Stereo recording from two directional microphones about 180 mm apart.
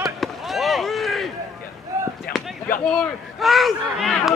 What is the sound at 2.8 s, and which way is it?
Speech, 5° left (ahead or behind).